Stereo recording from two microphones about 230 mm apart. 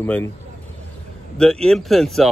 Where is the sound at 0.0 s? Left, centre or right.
Centre.